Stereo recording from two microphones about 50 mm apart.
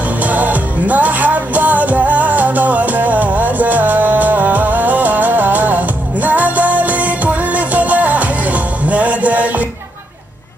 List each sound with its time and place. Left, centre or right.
0.2 s music: right